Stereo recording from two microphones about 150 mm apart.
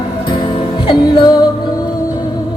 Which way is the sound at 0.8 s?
35° left (ahead or behind).